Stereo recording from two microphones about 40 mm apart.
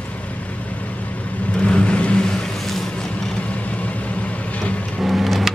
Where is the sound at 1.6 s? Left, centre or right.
Left.